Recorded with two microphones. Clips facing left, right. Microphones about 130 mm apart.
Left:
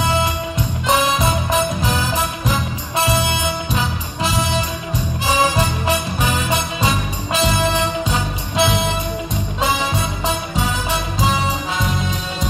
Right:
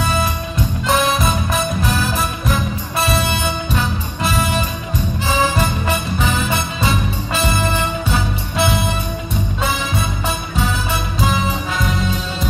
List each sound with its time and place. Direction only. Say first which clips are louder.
0.8 s music: even; 20° left (ahead or behind)